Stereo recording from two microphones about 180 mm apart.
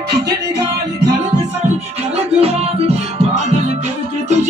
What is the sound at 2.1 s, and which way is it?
Music, 35° right (ahead or behind).